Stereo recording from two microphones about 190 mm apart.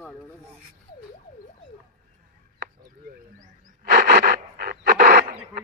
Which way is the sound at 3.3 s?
55° right (ahead or behind).